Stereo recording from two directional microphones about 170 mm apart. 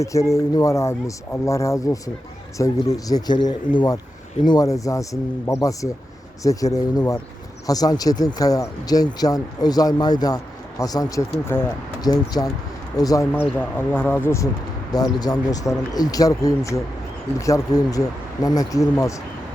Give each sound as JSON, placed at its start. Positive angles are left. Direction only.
{"t": 0.0, "sound": "speech", "side_deg": 20}